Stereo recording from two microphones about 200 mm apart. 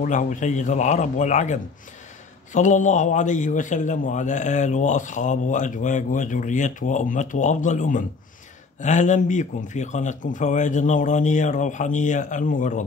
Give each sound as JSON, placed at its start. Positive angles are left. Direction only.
{"t": 0.0, "sound": "a man's voice", "side_deg": 40}